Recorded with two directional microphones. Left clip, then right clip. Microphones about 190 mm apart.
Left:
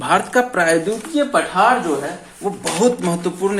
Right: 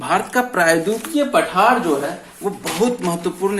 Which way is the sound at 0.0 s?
20° left (ahead or behind).